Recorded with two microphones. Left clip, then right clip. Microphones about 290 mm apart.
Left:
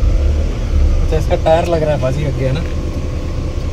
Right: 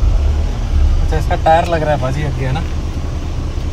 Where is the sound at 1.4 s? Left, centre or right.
Right.